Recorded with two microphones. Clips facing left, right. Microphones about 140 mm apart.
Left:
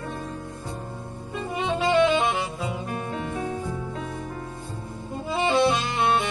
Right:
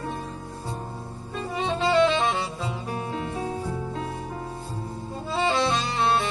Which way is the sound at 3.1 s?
35° right (ahead or behind).